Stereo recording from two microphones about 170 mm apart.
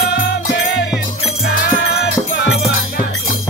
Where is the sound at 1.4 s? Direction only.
65° left (ahead or behind); by 2.5 s 80° left.